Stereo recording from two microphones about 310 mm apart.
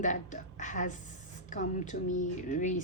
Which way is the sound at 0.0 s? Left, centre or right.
Left.